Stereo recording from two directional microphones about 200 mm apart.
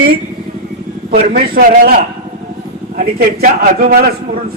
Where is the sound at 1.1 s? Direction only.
45° right (ahead or behind).